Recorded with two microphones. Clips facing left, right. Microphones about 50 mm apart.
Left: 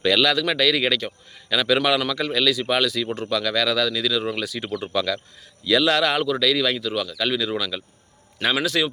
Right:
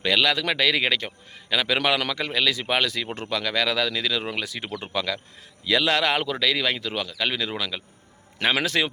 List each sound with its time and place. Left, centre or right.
0.0 s a man's voice: centre
8.5 s a man's voice: right